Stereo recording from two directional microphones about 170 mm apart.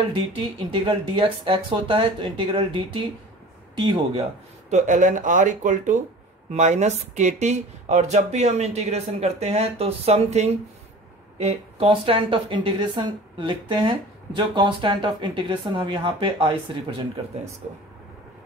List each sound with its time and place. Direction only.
0.1 s a woman's voice: 30° right (ahead or behind)